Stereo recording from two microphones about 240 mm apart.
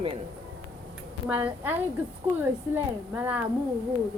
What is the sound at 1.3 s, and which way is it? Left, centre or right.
A woman's voice, centre.